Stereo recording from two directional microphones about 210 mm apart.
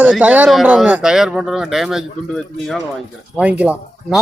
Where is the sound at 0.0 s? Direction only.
5° right (ahead or behind).